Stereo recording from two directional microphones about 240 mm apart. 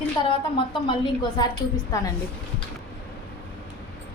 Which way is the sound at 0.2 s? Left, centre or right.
Left.